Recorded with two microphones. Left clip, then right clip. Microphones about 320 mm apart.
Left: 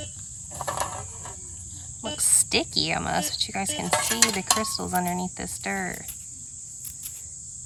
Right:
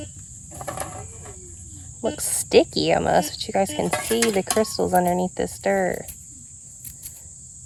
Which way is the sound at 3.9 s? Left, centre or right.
Left.